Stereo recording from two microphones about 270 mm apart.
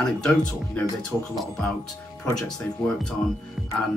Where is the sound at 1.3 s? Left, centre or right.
Centre.